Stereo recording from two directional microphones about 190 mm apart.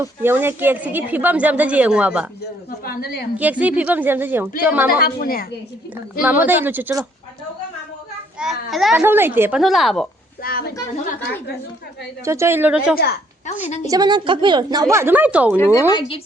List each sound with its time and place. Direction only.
0.0 s speech: 10° right (ahead or behind)
2.6 s a woman's voice: 50° left (ahead or behind)
3.3 s speech: 10° right (ahead or behind)
4.9 s a woman's voice: 50° left (ahead or behind)
6.2 s speech: 10° right (ahead or behind)
8.4 s speech: centre (ahead or behind)
9.0 s speech: 10° right (ahead or behind)
10.4 s a woman's voice: 55° left (ahead or behind)
10.9 s a woman's voice: 40° left (ahead or behind)
12.2 s speech: 15° right (ahead or behind)
13.8 s a woman's voice: 20° right (ahead or behind)
15.5 s speech: 10° left (ahead or behind)
15.9 s speech: 25° left (ahead or behind)